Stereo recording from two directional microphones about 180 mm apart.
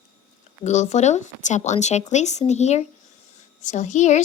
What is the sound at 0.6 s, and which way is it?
A woman's voice, 40° left (ahead or behind).